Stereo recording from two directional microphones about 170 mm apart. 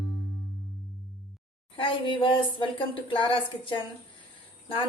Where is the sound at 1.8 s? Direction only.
30° left (ahead or behind).